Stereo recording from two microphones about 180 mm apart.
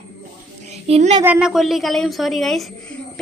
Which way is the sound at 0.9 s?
35° right (ahead or behind).